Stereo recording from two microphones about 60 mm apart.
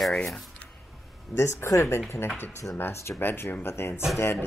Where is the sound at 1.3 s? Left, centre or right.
Left.